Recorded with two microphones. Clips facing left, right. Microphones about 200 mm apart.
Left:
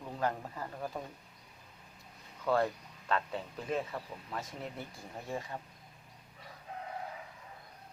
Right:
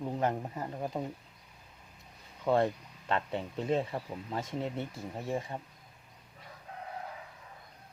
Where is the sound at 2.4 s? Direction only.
20° right (ahead or behind).